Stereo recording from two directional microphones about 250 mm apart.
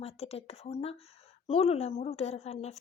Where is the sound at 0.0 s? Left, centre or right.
Left.